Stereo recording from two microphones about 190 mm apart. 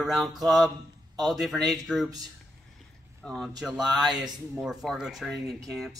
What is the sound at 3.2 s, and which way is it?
Speech, centre (ahead or behind).